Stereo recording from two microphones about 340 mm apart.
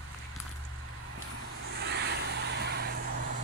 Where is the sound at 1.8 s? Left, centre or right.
Right.